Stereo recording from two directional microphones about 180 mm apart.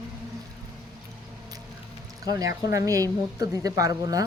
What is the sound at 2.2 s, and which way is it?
Speech, 20° right (ahead or behind).